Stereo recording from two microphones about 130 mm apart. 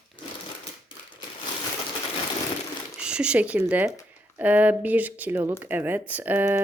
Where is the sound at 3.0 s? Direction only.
10° right (ahead or behind).